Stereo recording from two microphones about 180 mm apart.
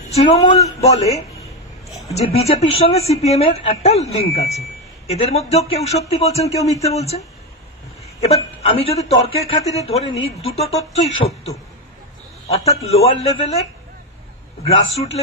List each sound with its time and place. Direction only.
0.1 s a woman's voice: 35° left (ahead or behind)